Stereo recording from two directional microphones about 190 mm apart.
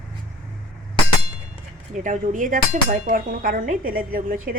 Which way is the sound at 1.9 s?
40° right (ahead or behind).